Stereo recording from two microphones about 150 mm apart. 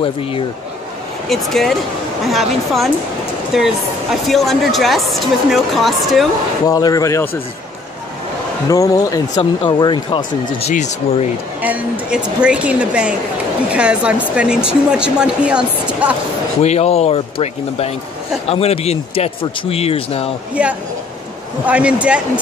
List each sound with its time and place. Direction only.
0.0 s speech: 40° left (ahead or behind)
1.3 s speech: centre (ahead or behind)
6.7 s a man's voice: 25° left (ahead or behind)
8.6 s a man's voice: 25° left (ahead or behind)
10.7 s speech: 50° left (ahead or behind)
11.6 s a woman's voice: 10° right (ahead or behind)
16.6 s speech: 45° left (ahead or behind)
20.6 s a woman's voice: 10° right (ahead or behind)